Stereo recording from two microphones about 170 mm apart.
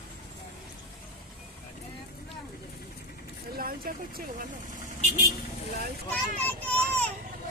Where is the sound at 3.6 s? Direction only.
60° right (ahead or behind).